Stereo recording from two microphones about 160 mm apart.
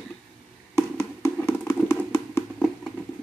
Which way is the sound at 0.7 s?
20° left (ahead or behind).